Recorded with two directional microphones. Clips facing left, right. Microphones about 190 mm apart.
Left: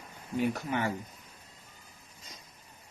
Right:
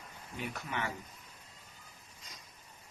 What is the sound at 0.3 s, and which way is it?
Speech, 40° left (ahead or behind).